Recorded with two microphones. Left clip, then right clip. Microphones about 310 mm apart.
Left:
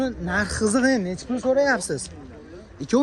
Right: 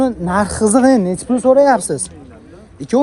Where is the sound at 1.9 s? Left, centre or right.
Right.